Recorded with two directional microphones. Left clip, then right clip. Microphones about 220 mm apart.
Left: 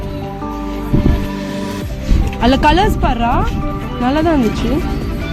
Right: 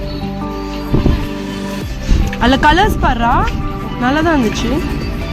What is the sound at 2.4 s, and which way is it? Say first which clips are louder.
Speech: right 1 dB; 20° left (ahead or behind).